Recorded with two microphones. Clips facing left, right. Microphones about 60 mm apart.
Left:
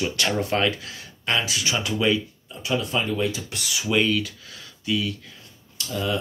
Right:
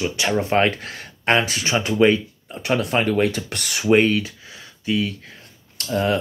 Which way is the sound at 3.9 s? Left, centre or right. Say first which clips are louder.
Right 6 dB; right.